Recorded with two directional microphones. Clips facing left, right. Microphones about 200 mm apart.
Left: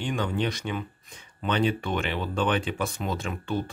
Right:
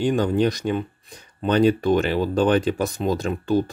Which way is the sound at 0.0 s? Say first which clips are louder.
Right 8 dB; 40° right (ahead or behind).